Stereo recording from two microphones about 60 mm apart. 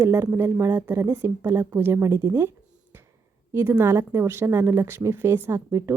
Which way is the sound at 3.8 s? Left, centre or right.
Right.